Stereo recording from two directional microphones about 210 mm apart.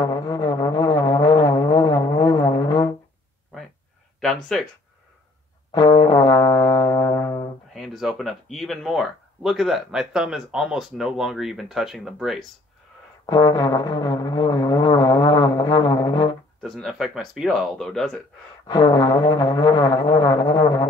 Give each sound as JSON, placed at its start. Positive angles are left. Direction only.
{"t": 0.0, "sound": "music", "side_deg": 20}
{"t": 4.2, "sound": "speech", "side_deg": 0}
{"t": 5.7, "sound": "music", "side_deg": 20}
{"t": 7.7, "sound": "speech", "side_deg": 0}
{"t": 13.3, "sound": "music", "side_deg": 20}
{"t": 16.6, "sound": "speech", "side_deg": 0}
{"t": 18.7, "sound": "music", "side_deg": 20}